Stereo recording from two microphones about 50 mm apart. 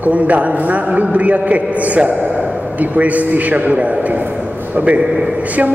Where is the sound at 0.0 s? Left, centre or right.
Right.